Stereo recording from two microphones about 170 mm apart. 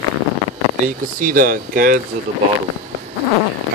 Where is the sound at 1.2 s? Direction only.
55° right (ahead or behind).